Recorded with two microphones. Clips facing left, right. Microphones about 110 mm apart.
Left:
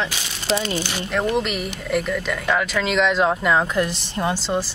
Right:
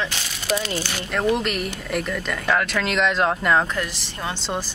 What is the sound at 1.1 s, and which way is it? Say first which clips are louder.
Speech: even; centre (ahead or behind).